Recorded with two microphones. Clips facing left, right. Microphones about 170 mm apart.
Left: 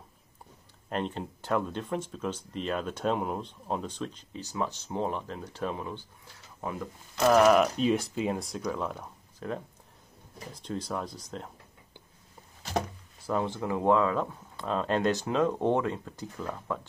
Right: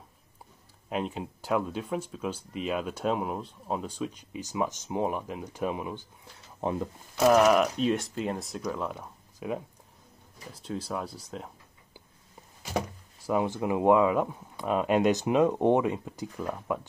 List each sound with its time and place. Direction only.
0.8 s speech: 5° right (ahead or behind)
6.6 s speech: 25° right (ahead or behind)
7.2 s speech: centre (ahead or behind)
13.3 s speech: 15° right (ahead or behind)